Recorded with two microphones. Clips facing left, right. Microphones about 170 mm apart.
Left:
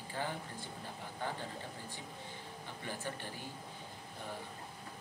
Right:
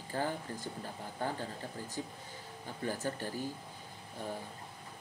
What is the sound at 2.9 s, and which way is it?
Speech, 40° right (ahead or behind).